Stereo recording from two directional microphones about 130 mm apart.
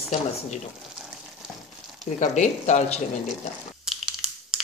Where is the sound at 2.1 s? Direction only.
65° left (ahead or behind).